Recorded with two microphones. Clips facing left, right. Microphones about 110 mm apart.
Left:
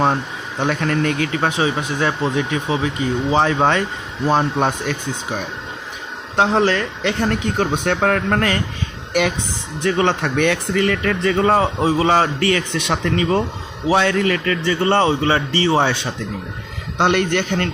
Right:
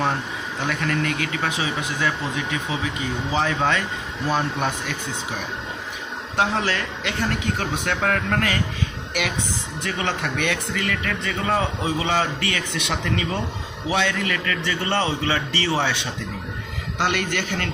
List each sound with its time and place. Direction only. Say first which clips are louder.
0.6 s speech: left 6 dB; 35° left (ahead or behind)
6.3 s speech: left 7 dB; 30° left (ahead or behind)
9.8 s speech: left 9 dB; 35° left (ahead or behind)
17.0 s speech: left 7 dB; 30° left (ahead or behind)